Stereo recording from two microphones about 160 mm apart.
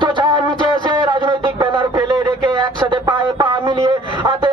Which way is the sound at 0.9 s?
30° right (ahead or behind).